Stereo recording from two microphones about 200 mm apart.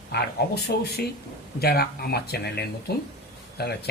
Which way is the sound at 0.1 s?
55° left (ahead or behind).